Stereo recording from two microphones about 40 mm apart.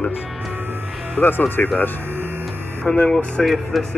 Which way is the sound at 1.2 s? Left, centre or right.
Left.